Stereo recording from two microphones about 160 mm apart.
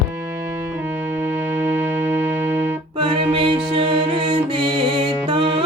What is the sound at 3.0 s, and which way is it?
Music, 30° right (ahead or behind).